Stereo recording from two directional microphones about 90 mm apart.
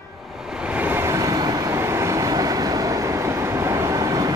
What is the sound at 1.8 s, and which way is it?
Train, 30° right (ahead or behind).